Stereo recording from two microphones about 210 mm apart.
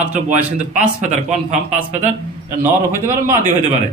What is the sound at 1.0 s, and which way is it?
Speech, 35° right (ahead or behind).